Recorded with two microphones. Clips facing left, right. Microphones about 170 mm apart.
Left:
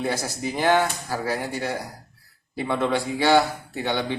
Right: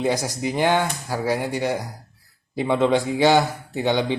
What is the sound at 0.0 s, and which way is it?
A man's voice, 15° right (ahead or behind).